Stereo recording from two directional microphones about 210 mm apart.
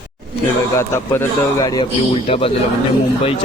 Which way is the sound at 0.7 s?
10° left (ahead or behind).